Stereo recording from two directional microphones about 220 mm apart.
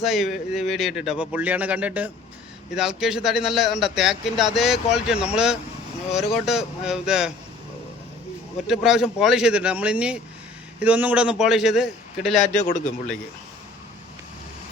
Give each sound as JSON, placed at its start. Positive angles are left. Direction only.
{"t": 0.0, "sound": "a man's voice", "side_deg": 0}
{"t": 8.6, "sound": "a man's voice", "side_deg": 0}
{"t": 12.5, "sound": "a man's voice", "side_deg": 35}